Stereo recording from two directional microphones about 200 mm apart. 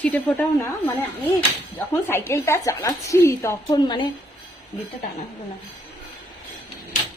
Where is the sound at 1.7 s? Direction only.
10° left (ahead or behind).